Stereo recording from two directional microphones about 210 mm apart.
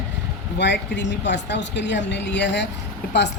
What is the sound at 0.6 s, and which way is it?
Speech, 55° left (ahead or behind).